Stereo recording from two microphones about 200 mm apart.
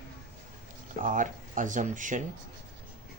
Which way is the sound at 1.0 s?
40° right (ahead or behind).